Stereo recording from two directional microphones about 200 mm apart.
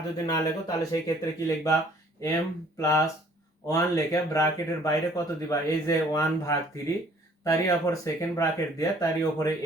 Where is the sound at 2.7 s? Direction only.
15° left (ahead or behind).